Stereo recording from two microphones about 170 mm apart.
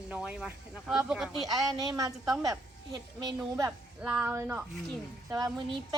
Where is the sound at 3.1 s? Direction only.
25° right (ahead or behind).